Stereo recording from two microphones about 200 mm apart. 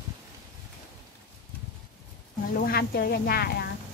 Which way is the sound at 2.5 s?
50° left (ahead or behind).